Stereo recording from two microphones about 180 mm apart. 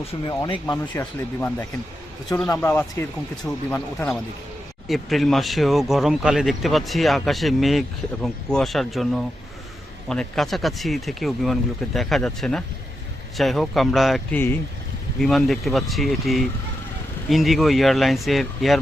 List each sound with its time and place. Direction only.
0.1 s speech: 25° left (ahead or behind)
0.9 s speech: 10° left (ahead or behind)
14.3 s speech: 10° left (ahead or behind)